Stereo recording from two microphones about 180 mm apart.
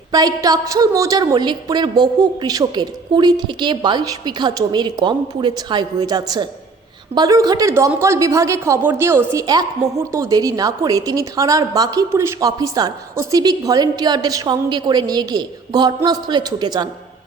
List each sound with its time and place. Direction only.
0.1 s speech: 20° right (ahead or behind)